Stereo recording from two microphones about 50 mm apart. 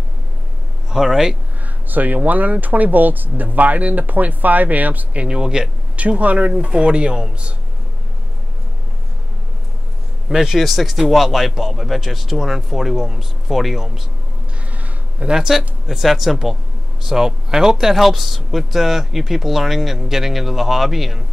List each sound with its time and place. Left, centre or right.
0.8 s speech: centre
1.9 s speech: right
5.2 s speech: centre
5.9 s speech: right
10.3 s speech: centre
10.6 s speech: centre
14.7 s a sound: right
15.2 s speech: centre